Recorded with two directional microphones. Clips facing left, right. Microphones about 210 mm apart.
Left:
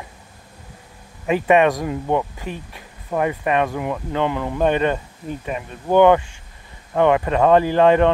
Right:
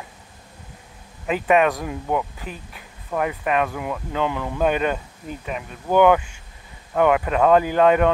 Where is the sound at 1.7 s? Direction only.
20° left (ahead or behind).